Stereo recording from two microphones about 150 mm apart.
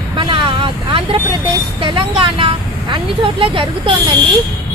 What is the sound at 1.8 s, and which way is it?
Speech, 35° right (ahead or behind).